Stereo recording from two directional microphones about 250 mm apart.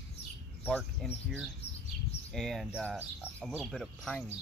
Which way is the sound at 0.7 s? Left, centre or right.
Centre.